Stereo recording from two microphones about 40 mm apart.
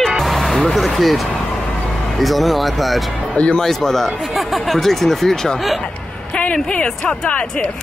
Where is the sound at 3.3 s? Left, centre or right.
Left.